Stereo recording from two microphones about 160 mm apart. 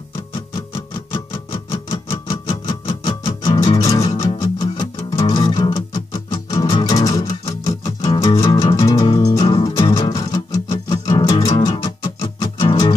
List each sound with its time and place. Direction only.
1.1 s music: 25° left (ahead or behind)
11.6 s music: 25° left (ahead or behind)